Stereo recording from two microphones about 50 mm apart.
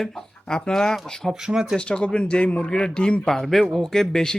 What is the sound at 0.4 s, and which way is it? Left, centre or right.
Speech, centre.